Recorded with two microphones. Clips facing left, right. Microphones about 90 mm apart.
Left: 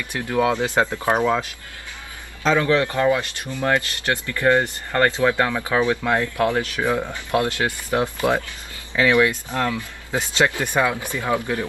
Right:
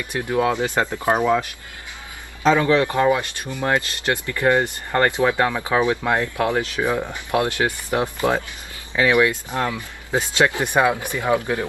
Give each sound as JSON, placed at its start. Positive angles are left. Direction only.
{"t": 0.0, "sound": "speech", "side_deg": -20}
{"t": 0.6, "sound": "speech", "side_deg": 20}
{"t": 0.9, "sound": "speech", "side_deg": -15}
{"t": 2.4, "sound": "speech", "side_deg": -20}